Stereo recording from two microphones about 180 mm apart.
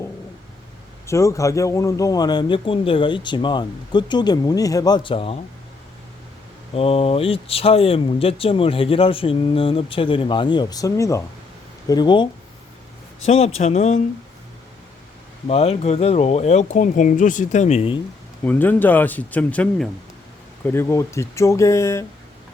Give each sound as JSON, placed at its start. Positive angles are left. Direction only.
{"t": 1.0, "sound": "a man's voice", "side_deg": 15}
{"t": 6.7, "sound": "a man's voice", "side_deg": 35}
{"t": 15.4, "sound": "speech", "side_deg": 35}
{"t": 18.4, "sound": "speech", "side_deg": 10}